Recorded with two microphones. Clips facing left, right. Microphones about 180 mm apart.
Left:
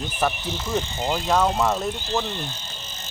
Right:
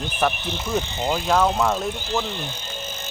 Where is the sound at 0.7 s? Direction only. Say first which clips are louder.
Right 1 dB; 15° right (ahead or behind).